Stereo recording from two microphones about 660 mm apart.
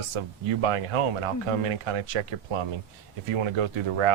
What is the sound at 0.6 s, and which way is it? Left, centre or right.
Speech, right.